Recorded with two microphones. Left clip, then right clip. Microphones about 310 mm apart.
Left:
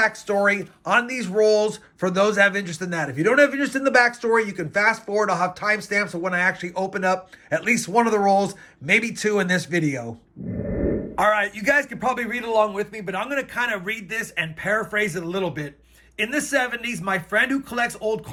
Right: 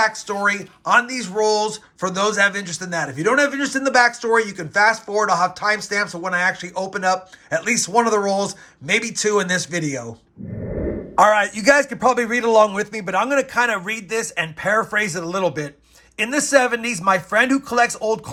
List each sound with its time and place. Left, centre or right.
0.0 s speech: centre
11.1 s speech: centre